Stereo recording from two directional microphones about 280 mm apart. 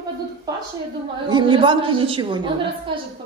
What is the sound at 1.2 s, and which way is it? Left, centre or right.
A woman's voice, centre.